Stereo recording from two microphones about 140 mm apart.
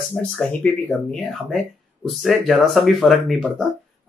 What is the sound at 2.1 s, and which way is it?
Speech, centre (ahead or behind).